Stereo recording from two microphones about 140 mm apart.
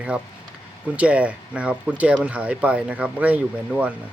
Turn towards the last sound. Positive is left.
turn(degrees=-10)  # may be behind; listen again after turning